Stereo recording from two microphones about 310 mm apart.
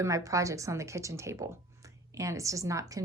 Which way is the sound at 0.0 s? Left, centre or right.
Centre.